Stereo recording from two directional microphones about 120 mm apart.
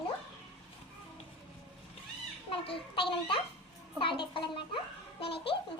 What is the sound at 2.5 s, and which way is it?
Speech, 50° left (ahead or behind).